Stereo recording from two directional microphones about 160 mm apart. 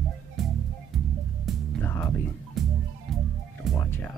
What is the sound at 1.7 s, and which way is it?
Music, 10° left (ahead or behind).